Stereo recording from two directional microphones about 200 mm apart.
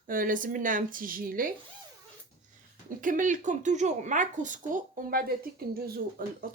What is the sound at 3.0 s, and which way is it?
Speech, 40° right (ahead or behind).